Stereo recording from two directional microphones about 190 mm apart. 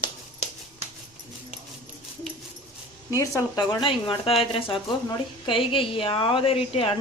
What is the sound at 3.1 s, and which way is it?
Speech, 15° left (ahead or behind).